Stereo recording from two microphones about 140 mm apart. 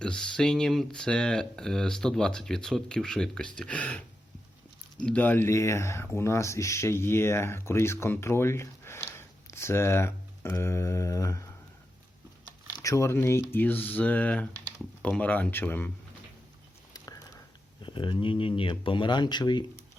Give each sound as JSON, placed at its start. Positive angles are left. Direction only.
{"t": 0.0, "sound": "speech", "side_deg": 5}
{"t": 5.0, "sound": "speech", "side_deg": 10}
{"t": 12.7, "sound": "speech", "side_deg": 25}
{"t": 17.8, "sound": "speech", "side_deg": 35}